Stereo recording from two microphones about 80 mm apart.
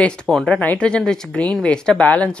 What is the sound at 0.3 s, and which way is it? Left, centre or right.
Speech, centre.